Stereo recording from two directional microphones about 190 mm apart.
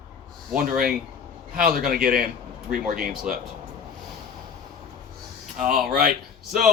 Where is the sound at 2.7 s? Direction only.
50° right (ahead or behind).